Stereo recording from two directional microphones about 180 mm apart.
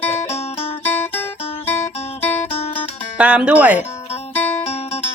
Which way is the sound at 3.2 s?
5° right (ahead or behind).